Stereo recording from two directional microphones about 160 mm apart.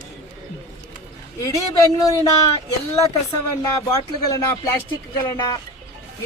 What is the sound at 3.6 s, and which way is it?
Speech, 20° left (ahead or behind).